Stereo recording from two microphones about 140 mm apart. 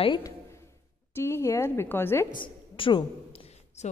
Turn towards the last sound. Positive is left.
turn(degrees=50)  # may be behind; listen again after turning